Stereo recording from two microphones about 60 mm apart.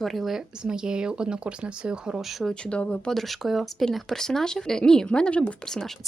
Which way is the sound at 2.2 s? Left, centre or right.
Centre.